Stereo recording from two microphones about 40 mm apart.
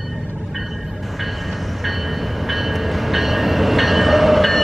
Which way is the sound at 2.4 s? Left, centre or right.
Centre.